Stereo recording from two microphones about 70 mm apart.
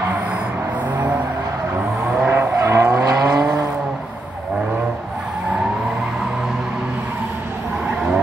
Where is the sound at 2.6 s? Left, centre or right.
Right.